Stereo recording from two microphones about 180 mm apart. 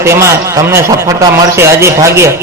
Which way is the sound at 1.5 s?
15° right (ahead or behind).